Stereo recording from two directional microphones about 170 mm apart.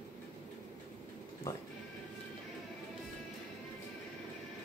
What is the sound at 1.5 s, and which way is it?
Speech, 15° left (ahead or behind).